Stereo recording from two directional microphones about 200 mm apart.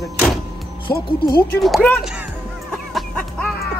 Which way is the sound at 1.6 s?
5° left (ahead or behind).